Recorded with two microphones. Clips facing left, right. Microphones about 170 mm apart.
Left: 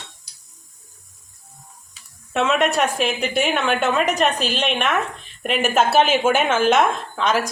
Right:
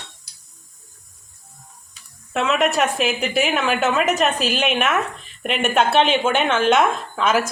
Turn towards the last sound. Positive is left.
turn(degrees=-5)  # may be behind; listen again after turning